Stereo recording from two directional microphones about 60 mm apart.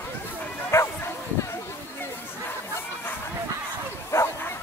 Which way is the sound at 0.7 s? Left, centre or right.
Left.